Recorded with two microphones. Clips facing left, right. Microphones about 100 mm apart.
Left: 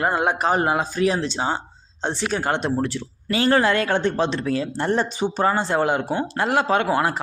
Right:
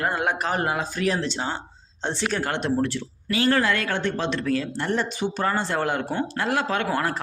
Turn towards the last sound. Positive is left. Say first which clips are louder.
# left 5 dB
turn(degrees=20)  # may be behind; listen again after turning